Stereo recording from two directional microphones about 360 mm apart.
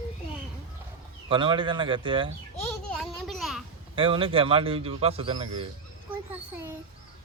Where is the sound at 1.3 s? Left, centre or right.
Centre.